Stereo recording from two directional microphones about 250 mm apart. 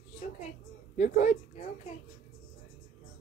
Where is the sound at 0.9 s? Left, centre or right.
Left.